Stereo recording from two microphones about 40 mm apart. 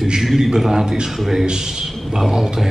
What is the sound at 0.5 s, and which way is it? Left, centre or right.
A man's voice, centre.